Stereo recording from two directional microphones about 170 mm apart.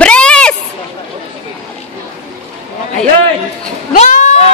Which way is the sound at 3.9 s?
45° left (ahead or behind).